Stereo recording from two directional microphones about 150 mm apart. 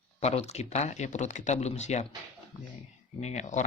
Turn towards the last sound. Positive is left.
turn(degrees=50)  # may be behind; listen again after turning